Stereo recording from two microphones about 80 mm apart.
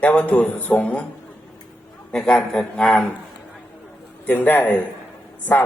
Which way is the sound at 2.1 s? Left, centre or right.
Centre.